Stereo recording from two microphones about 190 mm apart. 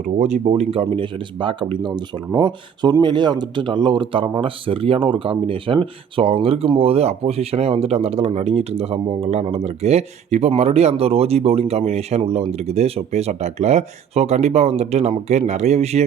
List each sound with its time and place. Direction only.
0.2 s speech: 35° right (ahead or behind)